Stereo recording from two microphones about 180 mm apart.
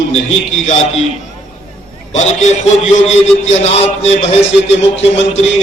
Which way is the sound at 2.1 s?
40° left (ahead or behind).